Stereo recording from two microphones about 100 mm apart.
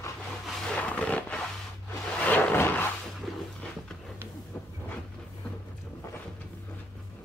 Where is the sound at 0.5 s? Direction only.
10° left (ahead or behind).